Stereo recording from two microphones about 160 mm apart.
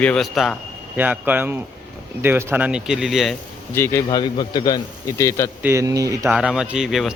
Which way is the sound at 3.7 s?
15° left (ahead or behind).